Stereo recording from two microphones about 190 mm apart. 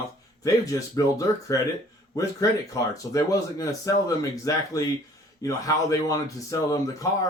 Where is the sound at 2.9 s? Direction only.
15° left (ahead or behind).